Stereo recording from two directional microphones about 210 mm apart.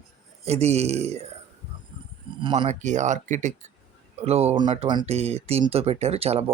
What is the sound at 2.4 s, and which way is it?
Speech, 25° right (ahead or behind).